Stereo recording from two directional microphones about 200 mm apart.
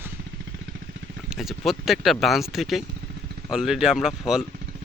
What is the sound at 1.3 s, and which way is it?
Speech, centre (ahead or behind).